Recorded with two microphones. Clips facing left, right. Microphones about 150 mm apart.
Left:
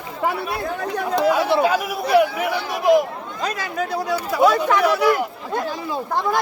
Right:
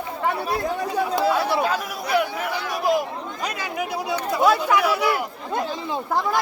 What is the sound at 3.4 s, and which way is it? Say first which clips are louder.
Speech: left 4 dB; 15° right (ahead or behind).